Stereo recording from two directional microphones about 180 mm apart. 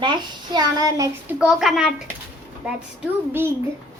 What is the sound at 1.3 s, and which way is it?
Speech, centre (ahead or behind).